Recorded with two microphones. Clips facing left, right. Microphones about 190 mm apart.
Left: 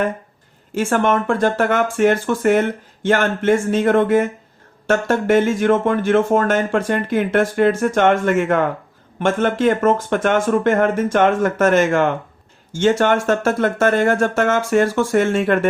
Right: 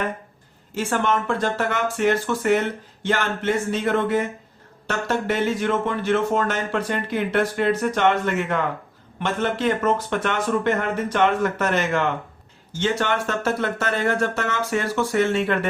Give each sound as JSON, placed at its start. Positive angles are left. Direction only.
{"t": 0.7, "sound": "speech", "side_deg": 50}